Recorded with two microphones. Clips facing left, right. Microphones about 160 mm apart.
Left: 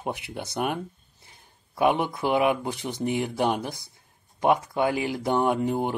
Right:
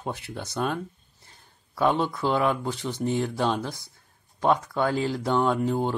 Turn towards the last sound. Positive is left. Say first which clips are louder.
# even
turn(degrees=15)  # may be behind; listen again after turning